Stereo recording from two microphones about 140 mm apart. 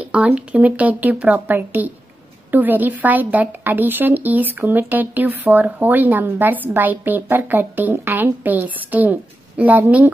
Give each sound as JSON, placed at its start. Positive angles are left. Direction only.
{"t": 0.0, "sound": "a woman's voice", "side_deg": -10}